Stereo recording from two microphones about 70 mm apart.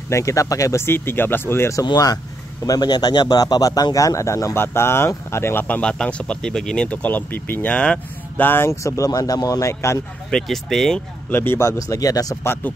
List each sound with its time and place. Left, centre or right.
0.1 s speech: left
0.8 s speech: left
1.9 s a man's voice: left
4.6 s speech: left
5.7 s speech: centre
7.0 s speech: left
7.7 s speech: centre
8.5 s speech: left
8.8 s speech: left
10.3 s speech: centre
11.2 s speech: left
11.9 s a man's voice: left